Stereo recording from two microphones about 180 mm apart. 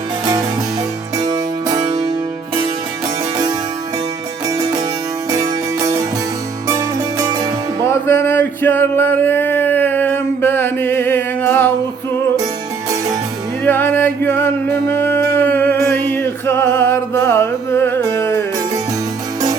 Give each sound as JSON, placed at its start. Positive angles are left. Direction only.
{"t": 1.2, "sound": "music", "side_deg": -20}
{"t": 4.4, "sound": "music", "side_deg": -20}
{"t": 7.9, "sound": "a sound", "side_deg": 15}
{"t": 13.7, "sound": "male singing", "side_deg": 10}